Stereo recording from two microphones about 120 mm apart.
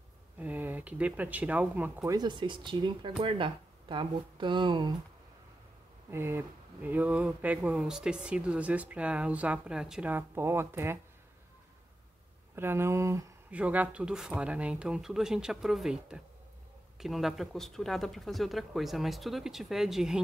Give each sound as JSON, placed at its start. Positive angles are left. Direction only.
{"t": 0.4, "sound": "speech", "side_deg": -15}
{"t": 2.0, "sound": "speech", "side_deg": -35}
{"t": 6.0, "sound": "speech", "side_deg": -20}
{"t": 10.1, "sound": "speech", "side_deg": -20}
{"t": 12.5, "sound": "speech", "side_deg": -20}
{"t": 13.5, "sound": "speech", "side_deg": -10}